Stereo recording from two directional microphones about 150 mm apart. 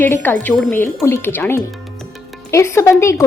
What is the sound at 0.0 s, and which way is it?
Speech, 15° left (ahead or behind).